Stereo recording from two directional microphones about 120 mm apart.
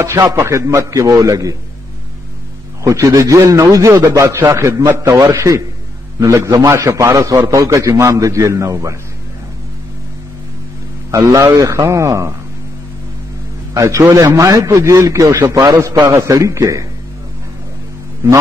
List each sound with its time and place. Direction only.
0.0 s a man's voice: 25° right (ahead or behind)
2.8 s a man's voice: 25° right (ahead or behind)
11.1 s a man's voice: 25° right (ahead or behind)
13.7 s a man's voice: 25° right (ahead or behind)
18.2 s a man's voice: 20° right (ahead or behind)